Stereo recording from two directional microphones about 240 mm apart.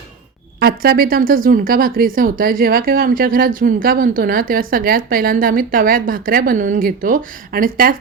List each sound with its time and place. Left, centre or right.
0.6 s speech: right